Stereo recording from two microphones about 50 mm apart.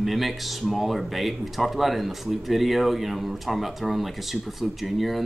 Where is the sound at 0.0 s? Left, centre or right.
Centre.